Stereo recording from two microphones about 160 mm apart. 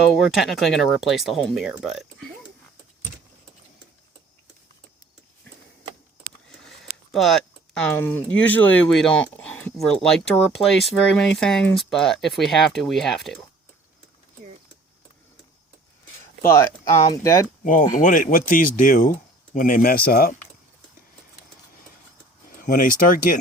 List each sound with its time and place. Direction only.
0.1 s speech: centre (ahead or behind)
6.6 s speech: centre (ahead or behind)
16.4 s speech: 15° left (ahead or behind)
17.6 s speech: 55° left (ahead or behind)
22.4 s speech: 60° left (ahead or behind)